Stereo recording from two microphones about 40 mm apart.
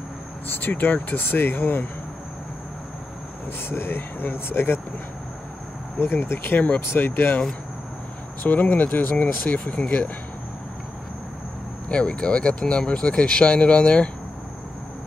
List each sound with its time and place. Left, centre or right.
0.5 s speech: left
1.2 s speech: left
3.6 s speech: left
5.9 s speech: left
8.5 s speech: left
9.8 s speech: left
11.9 s speech: left